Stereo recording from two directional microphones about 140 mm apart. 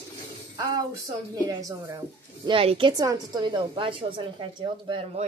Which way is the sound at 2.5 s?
40° right (ahead or behind).